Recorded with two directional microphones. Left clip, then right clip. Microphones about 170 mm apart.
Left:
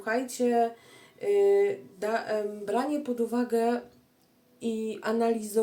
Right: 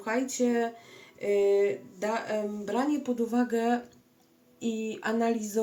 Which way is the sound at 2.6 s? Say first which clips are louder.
Right 1 dB; 15° left (ahead or behind).